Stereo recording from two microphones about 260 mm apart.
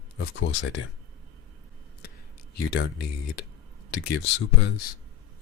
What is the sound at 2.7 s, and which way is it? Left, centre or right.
Speech, left.